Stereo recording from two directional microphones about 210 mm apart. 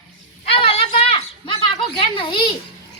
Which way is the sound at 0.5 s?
25° left (ahead or behind).